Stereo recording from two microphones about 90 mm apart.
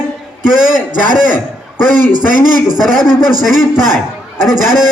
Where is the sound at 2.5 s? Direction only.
50° right (ahead or behind).